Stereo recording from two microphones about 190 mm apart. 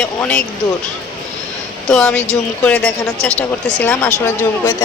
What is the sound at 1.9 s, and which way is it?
Speech, 5° left (ahead or behind).